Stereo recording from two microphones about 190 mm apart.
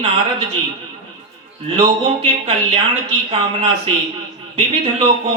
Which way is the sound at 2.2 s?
30° right (ahead or behind).